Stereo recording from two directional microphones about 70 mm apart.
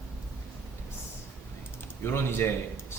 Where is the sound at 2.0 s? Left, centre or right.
Left.